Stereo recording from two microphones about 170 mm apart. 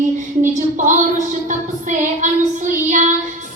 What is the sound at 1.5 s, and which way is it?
Child singing, 45° right (ahead or behind).